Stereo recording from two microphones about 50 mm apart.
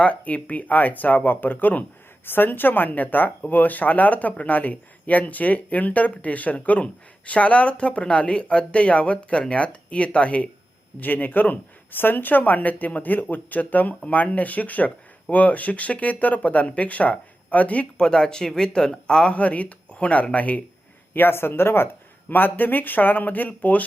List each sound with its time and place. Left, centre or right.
0.0 s a man's voice: left
11.0 s speech: left
17.9 s a man's voice: centre
21.1 s speech: left
22.3 s speech: left